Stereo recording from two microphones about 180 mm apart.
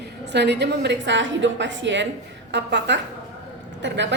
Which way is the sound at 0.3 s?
70° right (ahead or behind).